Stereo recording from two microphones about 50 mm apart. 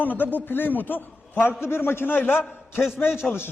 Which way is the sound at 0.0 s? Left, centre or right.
Left.